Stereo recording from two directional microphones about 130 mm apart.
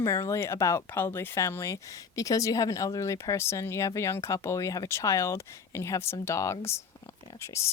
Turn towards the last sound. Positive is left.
turn(degrees=20)  # may be behind; listen again after turning